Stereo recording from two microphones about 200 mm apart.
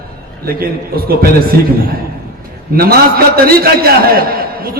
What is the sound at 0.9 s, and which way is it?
Speech, 50° right (ahead or behind).